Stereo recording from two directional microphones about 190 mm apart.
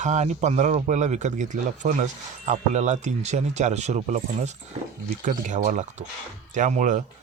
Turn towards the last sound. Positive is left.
turn(degrees=-40)  # may be behind; listen again after turning